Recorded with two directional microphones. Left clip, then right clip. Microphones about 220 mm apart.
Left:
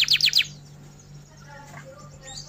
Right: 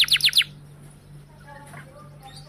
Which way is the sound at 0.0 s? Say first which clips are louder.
Right 1 dB; 25° right (ahead or behind).